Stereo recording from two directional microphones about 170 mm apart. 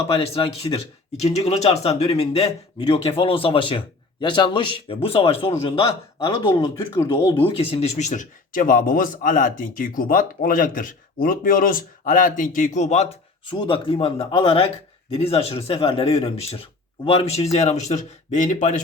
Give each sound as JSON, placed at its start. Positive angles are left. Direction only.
{"t": 0.6, "sound": "speech", "side_deg": 40}
{"t": 13.4, "sound": "speech", "side_deg": 30}